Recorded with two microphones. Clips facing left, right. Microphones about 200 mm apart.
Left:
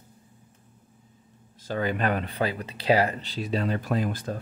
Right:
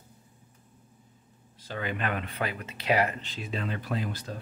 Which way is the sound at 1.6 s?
40° left (ahead or behind).